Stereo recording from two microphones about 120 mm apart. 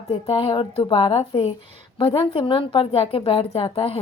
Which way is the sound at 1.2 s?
60° left (ahead or behind).